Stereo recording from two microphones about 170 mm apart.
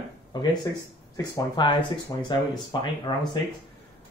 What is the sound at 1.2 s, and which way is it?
Speech, 25° left (ahead or behind).